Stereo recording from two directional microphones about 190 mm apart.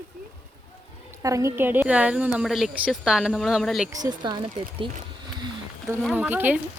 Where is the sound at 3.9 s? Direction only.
20° right (ahead or behind).